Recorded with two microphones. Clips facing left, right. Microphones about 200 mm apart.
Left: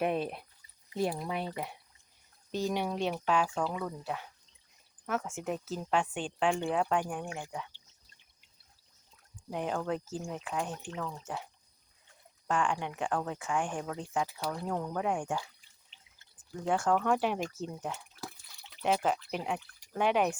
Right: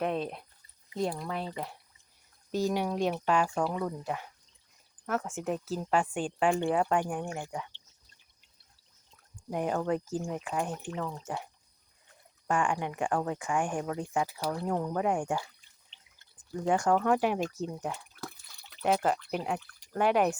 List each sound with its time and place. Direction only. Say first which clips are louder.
0.0 s speech: even; 10° left (ahead or behind)
2.5 s speech: right 3 dB; 10° right (ahead or behind)
5.0 s speech: right 2 dB; 5° left (ahead or behind)
9.5 s speech: right 3 dB; 5° right (ahead or behind)
11.1 s speech: right 3 dB; 5° left (ahead or behind)
12.5 s speech: right 2 dB; 10° right (ahead or behind)
15.9 s drip: even; 5° left (ahead or behind)
16.6 s speech: right 3 dB; 15° right (ahead or behind)
16.9 s speech: right 2 dB; 5° right (ahead or behind)
17.9 s drip: right 1 dB; 5° left (ahead or behind)
20.0 s speech: right 2 dB; 5° right (ahead or behind)